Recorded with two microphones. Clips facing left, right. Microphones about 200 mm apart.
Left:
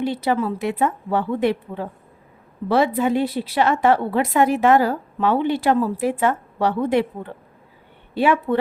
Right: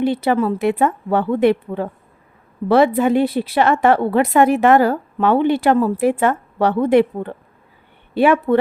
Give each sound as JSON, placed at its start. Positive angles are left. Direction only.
{"t": 0.0, "sound": "a woman's voice", "side_deg": -55}
{"t": 8.1, "sound": "a woman's voice", "side_deg": -55}